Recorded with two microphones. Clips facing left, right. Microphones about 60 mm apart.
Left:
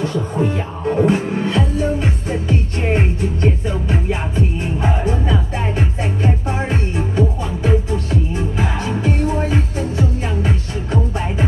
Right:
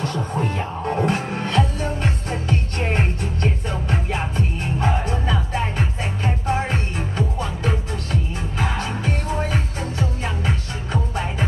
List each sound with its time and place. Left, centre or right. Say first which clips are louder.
0.0 s music: left 5 dB; centre